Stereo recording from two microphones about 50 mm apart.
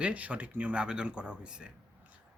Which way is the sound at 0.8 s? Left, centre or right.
Centre.